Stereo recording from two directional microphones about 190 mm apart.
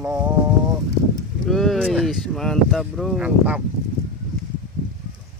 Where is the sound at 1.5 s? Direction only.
Centre (ahead or behind).